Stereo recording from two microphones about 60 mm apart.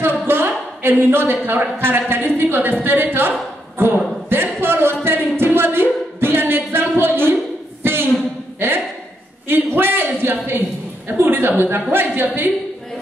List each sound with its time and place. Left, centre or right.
0.0 s a woman's voice: right
4.3 s a sound: right
11.1 s a woman's voice: right